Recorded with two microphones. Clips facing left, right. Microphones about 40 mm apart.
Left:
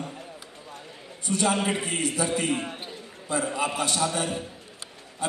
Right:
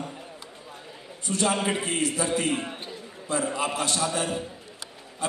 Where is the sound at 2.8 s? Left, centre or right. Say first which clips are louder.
Right 1 dB; centre.